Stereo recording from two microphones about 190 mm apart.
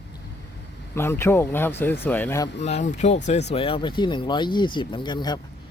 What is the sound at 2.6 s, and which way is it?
Speech, 35° left (ahead or behind).